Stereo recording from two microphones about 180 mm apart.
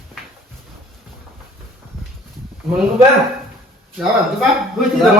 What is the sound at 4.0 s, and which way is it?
Speech, centre (ahead or behind).